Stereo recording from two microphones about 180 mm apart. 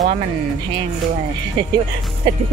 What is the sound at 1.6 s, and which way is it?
Speech, 25° right (ahead or behind).